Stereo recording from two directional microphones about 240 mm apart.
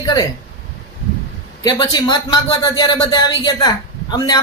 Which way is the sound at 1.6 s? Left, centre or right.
Centre.